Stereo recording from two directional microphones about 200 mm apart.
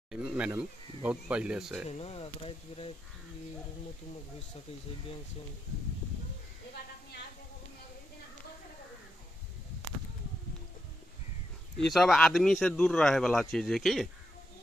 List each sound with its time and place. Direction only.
0.1 s a sound: 5° right (ahead or behind)
0.5 s speech: 5° right (ahead or behind)
1.9 s speech: 30° left (ahead or behind)
11.8 s speech: centre (ahead or behind)